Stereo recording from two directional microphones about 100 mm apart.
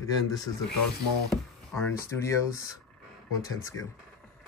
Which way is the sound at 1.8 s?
25° left (ahead or behind).